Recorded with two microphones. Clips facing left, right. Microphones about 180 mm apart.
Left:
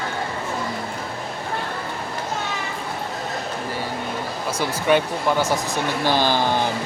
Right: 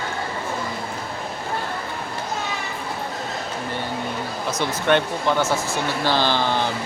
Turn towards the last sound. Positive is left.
turn(degrees=15)  # may be behind; listen again after turning